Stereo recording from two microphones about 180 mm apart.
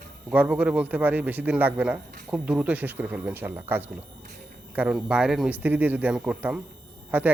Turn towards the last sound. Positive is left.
turn(degrees=-10)  # may be behind; listen again after turning